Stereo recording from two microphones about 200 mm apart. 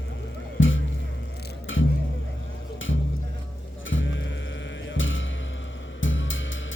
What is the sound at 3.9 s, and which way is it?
Music, 70° left (ahead or behind).